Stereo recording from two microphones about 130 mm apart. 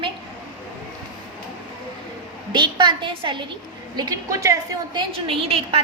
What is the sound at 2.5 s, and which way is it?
Speech, 35° right (ahead or behind).